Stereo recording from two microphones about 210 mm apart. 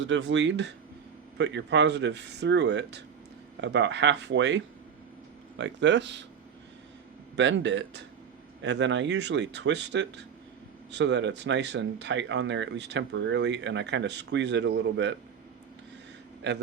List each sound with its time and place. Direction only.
0.0 s speech: 60° right (ahead or behind)
7.3 s speech: 60° right (ahead or behind)